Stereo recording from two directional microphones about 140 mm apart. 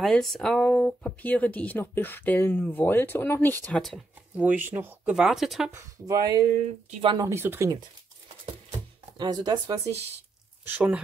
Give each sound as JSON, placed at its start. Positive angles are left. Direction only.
{"t": 0.0, "sound": "speech", "side_deg": 0}
{"t": 4.4, "sound": "speech", "side_deg": -10}
{"t": 5.1, "sound": "speech", "side_deg": -5}
{"t": 5.7, "sound": "speech", "side_deg": -20}
{"t": 9.1, "sound": "speech", "side_deg": -30}
{"t": 10.6, "sound": "speech", "side_deg": -15}